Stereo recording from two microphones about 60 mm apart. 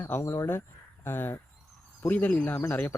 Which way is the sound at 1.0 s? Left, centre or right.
Left.